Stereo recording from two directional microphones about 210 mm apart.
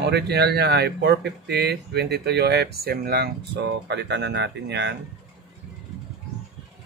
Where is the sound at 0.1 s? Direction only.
50° right (ahead or behind).